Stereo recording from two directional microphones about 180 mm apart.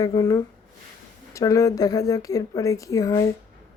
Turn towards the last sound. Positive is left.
turn(degrees=20)  # may be behind; listen again after turning